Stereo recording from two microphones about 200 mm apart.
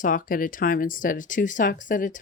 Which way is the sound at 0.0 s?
40° left (ahead or behind).